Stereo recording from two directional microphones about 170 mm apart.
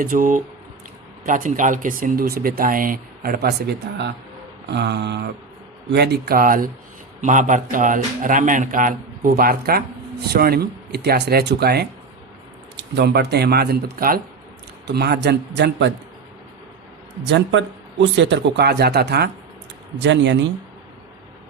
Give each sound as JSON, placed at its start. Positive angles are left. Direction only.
{"t": 0.0, "sound": "a man's voice", "side_deg": -55}
{"t": 4.7, "sound": "a sound", "side_deg": -90}
{"t": 5.9, "sound": "a man's voice", "side_deg": -70}
{"t": 14.8, "sound": "speech", "side_deg": -75}
{"t": 17.2, "sound": "speech", "side_deg": -90}
{"t": 20.0, "sound": "speech", "side_deg": -90}